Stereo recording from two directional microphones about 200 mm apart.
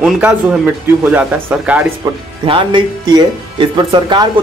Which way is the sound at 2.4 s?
25° right (ahead or behind).